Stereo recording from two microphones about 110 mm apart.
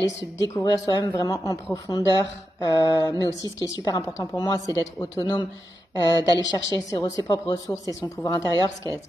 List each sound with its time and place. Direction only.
0.4 s speech: 35° left (ahead or behind)
5.2 s speech: 45° left (ahead or behind)